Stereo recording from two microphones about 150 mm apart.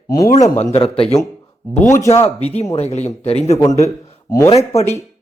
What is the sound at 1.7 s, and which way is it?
Speech, 20° left (ahead or behind).